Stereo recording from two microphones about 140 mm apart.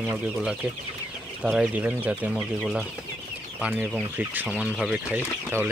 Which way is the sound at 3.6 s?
10° right (ahead or behind).